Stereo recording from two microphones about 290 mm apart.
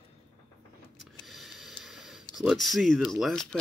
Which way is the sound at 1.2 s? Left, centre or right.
Centre.